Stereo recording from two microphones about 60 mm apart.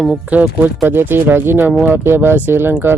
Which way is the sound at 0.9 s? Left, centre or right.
Right.